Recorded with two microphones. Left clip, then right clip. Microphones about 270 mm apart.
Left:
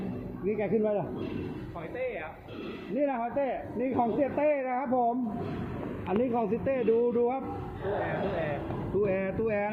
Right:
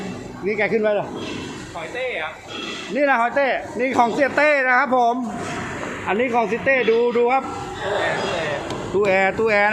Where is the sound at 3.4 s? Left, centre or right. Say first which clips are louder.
Right 11 dB; right.